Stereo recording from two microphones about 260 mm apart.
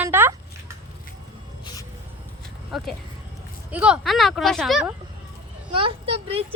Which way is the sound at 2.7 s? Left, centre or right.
Centre.